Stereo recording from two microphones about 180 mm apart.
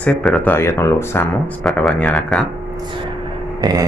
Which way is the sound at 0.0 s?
5° left (ahead or behind).